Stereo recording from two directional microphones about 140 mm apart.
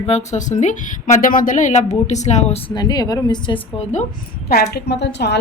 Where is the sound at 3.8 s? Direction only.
55° left (ahead or behind).